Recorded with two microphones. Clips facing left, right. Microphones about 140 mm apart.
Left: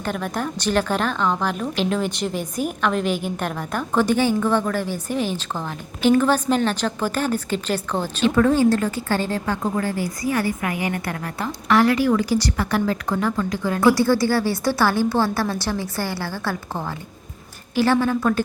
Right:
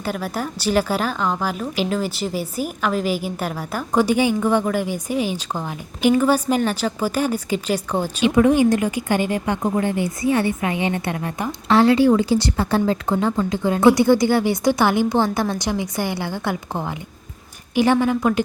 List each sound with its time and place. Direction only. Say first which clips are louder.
0.0 s a woman's voice: even; 5° right (ahead or behind)